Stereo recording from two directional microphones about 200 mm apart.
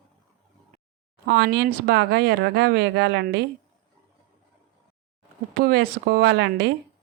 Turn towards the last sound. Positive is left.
turn(degrees=-55)  # may be behind; listen again after turning